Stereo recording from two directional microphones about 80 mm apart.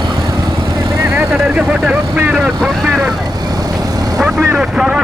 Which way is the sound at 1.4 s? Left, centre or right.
Centre.